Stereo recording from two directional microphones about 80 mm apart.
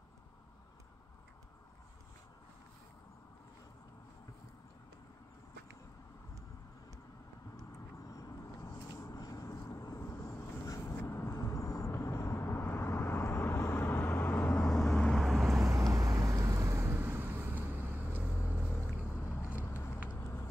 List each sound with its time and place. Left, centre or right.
8.1 s vehicle: left
10.8 s vehicle: left
11.3 s vehicle: left
14.5 s vehicle: centre
15.1 s vehicle: centre
15.7 s vehicle: right
16.8 s vehicle: right
19.2 s vehicle: left
19.6 s a sound: left